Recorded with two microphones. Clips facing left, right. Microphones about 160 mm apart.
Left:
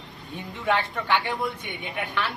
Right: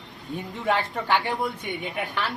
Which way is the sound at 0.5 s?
40° right (ahead or behind).